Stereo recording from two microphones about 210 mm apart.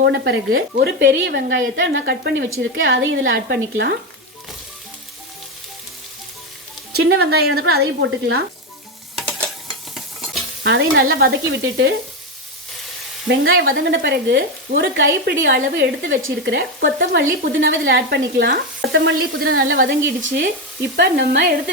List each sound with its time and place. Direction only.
0.0 s speech: 55° right (ahead or behind)
2.6 s speech: 65° right (ahead or behind)
6.9 s speech: 55° right (ahead or behind)
9.1 s stir: 5° left (ahead or behind)
10.6 s stir: 60° right (ahead or behind)
11.0 s speech: 45° right (ahead or behind)
13.2 s speech: 60° right (ahead or behind)
20.2 s speech: 55° right (ahead or behind)